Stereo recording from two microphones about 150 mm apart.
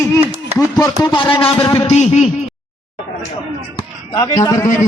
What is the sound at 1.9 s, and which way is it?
Speech, 45° left (ahead or behind).